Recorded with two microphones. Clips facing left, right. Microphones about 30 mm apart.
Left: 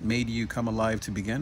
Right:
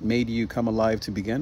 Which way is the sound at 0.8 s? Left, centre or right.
Right.